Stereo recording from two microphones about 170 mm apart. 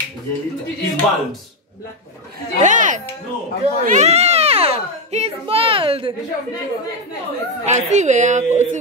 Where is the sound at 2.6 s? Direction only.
45° right (ahead or behind); by 6.1 s 30° right (ahead or behind).